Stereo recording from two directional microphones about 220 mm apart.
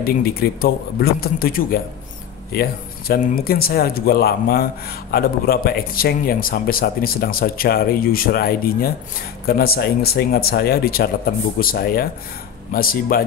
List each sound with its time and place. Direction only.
0.0 s speech: 45° left (ahead or behind)